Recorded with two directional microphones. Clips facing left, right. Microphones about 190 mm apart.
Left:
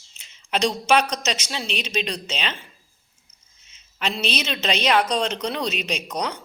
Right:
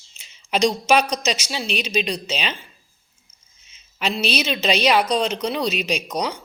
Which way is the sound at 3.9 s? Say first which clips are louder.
Right 3 dB; 10° right (ahead or behind).